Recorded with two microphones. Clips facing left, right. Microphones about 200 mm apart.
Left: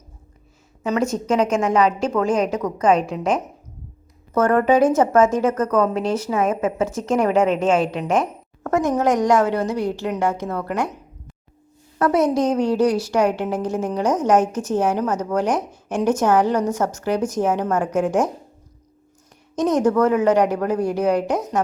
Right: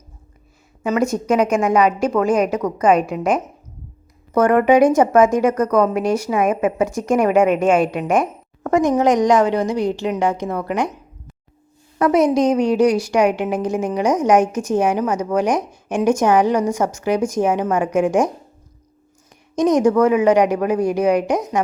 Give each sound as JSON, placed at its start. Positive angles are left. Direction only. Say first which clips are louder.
{"t": 0.8, "sound": "speech", "louder": "right 2 dB", "side_deg": -10}
{"t": 11.9, "sound": "speech", "louder": "right 3 dB", "side_deg": -15}
{"t": 19.5, "sound": "speech", "louder": "right 3 dB", "side_deg": -15}